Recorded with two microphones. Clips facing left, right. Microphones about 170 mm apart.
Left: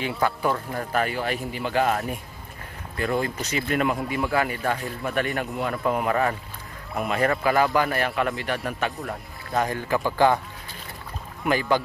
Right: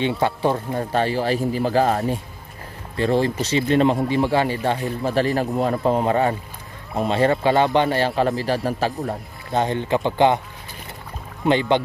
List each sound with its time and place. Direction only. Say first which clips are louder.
0.0 s speech: right 4 dB; 25° right (ahead or behind)
11.4 s speech: right 4 dB; 25° right (ahead or behind)